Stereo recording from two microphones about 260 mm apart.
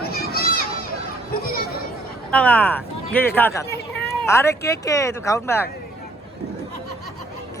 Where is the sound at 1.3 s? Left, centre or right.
Left.